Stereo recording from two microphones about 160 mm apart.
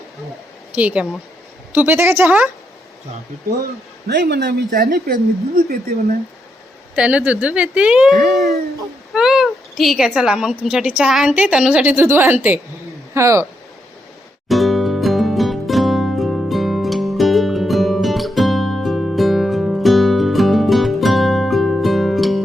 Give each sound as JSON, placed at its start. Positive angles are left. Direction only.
{"t": 0.8, "sound": "speech", "side_deg": -5}
{"t": 4.1, "sound": "a man's voice", "side_deg": -90}
{"t": 4.7, "sound": "speech", "side_deg": -60}
{"t": 6.9, "sound": "a woman's voice", "side_deg": -5}
{"t": 14.4, "sound": "music", "side_deg": 0}